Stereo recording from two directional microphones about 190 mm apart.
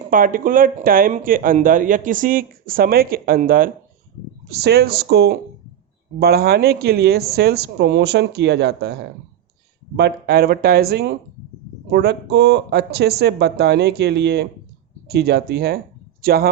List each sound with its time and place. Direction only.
0.1 s speech: 45° right (ahead or behind)